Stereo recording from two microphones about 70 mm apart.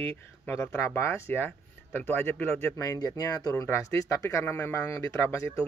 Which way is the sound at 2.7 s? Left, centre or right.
Left.